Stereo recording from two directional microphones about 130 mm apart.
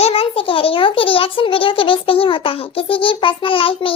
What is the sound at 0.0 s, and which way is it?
A child's voice, 45° left (ahead or behind).